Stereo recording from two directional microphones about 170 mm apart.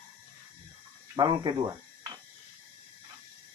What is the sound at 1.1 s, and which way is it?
Speech, 25° right (ahead or behind).